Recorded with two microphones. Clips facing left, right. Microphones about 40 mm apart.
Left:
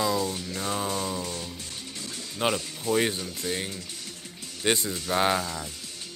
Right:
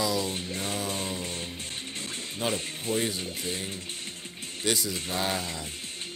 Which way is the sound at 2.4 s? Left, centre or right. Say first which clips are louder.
Left 4 dB; left.